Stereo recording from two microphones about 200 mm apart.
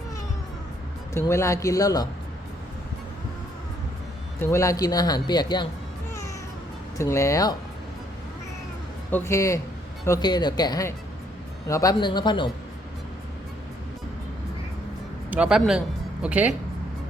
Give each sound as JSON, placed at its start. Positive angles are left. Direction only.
{"t": 1.1, "sound": "a man's voice", "side_deg": 15}
{"t": 4.4, "sound": "speech", "side_deg": 15}
{"t": 7.0, "sound": "a man's voice", "side_deg": 15}
{"t": 9.0, "sound": "a man's voice", "side_deg": 10}
{"t": 15.3, "sound": "speech", "side_deg": -5}